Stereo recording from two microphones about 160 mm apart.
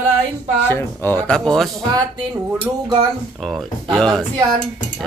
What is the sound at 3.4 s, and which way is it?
Speech, centre (ahead or behind).